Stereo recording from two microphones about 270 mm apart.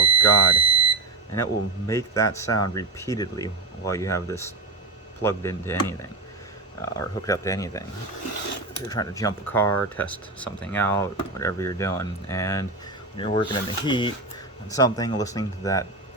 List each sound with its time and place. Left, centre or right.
0.0 s smoke detector: centre
1.9 s speech: centre
8.9 s speech: centre